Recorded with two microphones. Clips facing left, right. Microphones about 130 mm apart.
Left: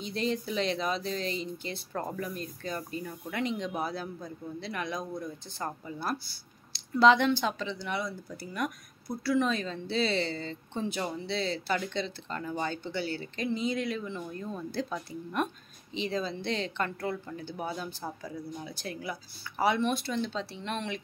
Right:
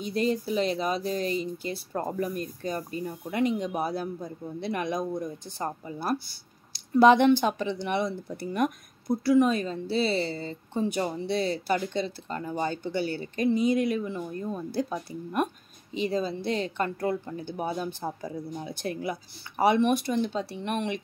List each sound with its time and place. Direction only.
0.1 s speech: 45° right (ahead or behind)
1.9 s speech: 20° right (ahead or behind)
2.3 s speech: 45° right (ahead or behind)
3.0 s speech: 25° right (ahead or behind)
3.4 s speech: 10° right (ahead or behind)
10.1 s speech: 35° right (ahead or behind)
11.1 s speech: 15° right (ahead or behind)
12.4 s speech: 25° right (ahead or behind)
13.0 s speech: 45° right (ahead or behind)
13.5 s speech: 15° right (ahead or behind)
15.9 s speech: 40° right (ahead or behind)
17.4 s speech: 20° right (ahead or behind)